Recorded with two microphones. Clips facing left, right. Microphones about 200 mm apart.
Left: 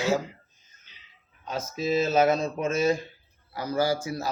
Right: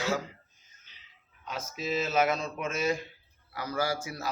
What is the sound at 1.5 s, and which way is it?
Speech, 40° left (ahead or behind).